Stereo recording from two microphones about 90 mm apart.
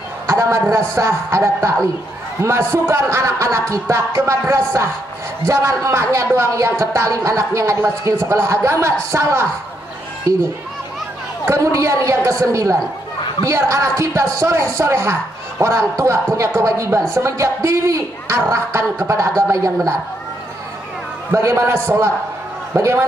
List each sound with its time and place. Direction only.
0.3 s speech: 35° right (ahead or behind)
11.4 s speech: 35° right (ahead or behind)
21.3 s speech: 30° right (ahead or behind)
22.8 s speech: 35° right (ahead or behind)